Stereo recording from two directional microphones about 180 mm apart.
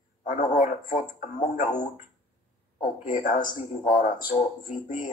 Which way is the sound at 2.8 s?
50° left (ahead or behind).